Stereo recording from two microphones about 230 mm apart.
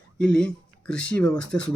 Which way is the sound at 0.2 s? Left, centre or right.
Centre.